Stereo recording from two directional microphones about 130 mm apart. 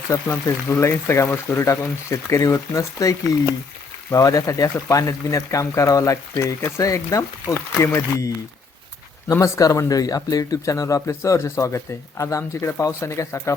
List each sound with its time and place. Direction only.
0.1 s speech: 20° left (ahead or behind)
9.3 s speech: 25° left (ahead or behind)